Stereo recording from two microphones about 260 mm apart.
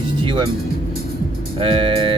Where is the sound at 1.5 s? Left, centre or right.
Right.